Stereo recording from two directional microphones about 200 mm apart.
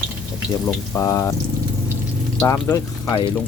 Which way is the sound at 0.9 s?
15° left (ahead or behind).